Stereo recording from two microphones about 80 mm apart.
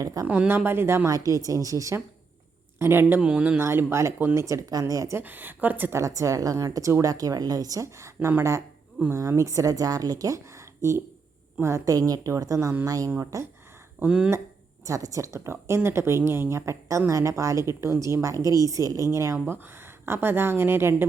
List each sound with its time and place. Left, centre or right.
0.0 s a woman's voice: right
0.3 s a woman's voice: right
1.0 s a woman's voice: right
2.7 s speech: right
3.2 s speech: centre
3.6 s a woman's voice: right
5.1 s a woman's voice: right
6.0 s a woman's voice: right
13.1 s a woman's voice: right
14.0 s speech: centre
14.8 s a woman's voice: right